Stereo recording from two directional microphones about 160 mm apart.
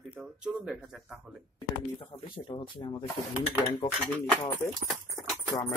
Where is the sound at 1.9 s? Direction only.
30° left (ahead or behind).